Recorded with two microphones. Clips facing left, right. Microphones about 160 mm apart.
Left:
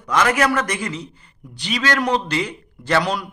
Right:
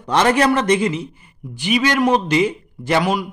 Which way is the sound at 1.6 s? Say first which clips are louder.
Right 5 dB; 15° right (ahead or behind).